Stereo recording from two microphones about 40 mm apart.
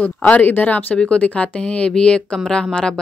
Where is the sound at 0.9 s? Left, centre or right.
Left.